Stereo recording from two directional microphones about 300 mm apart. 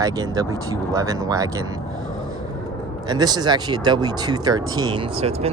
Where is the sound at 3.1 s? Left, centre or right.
Centre.